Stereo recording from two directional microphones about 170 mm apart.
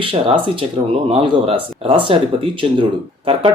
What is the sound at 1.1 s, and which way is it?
Speech, 35° right (ahead or behind).